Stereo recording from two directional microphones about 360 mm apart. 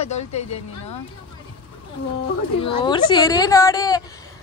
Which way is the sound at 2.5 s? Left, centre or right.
Centre.